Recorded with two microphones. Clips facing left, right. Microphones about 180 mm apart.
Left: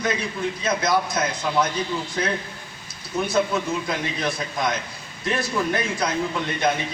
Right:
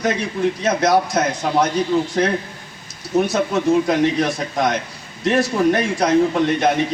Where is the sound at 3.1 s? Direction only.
75° right (ahead or behind).